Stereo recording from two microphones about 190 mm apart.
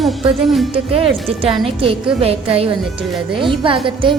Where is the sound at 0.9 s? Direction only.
30° right (ahead or behind).